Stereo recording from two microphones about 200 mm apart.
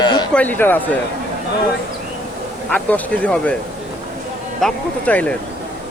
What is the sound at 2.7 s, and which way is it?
Speech, 10° left (ahead or behind).